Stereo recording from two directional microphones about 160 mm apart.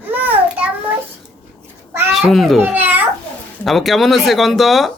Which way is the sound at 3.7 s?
Centre (ahead or behind).